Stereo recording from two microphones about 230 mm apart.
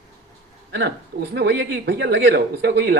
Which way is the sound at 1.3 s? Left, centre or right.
Right.